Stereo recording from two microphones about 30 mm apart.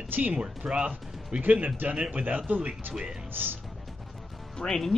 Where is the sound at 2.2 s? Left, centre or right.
Right.